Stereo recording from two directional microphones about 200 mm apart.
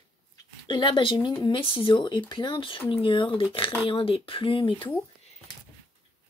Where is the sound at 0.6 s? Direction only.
25° left (ahead or behind).